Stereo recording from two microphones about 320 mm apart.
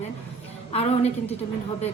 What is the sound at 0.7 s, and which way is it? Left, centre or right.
Speech, centre.